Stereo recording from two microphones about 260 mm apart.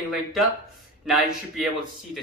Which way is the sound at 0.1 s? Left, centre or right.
Centre.